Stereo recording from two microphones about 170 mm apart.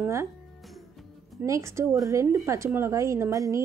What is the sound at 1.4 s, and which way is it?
Speech, 15° right (ahead or behind).